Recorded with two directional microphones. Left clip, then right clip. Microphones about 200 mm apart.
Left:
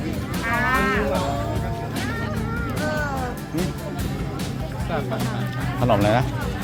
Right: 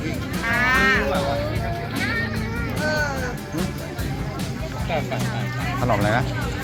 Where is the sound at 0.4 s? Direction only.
50° left (ahead or behind).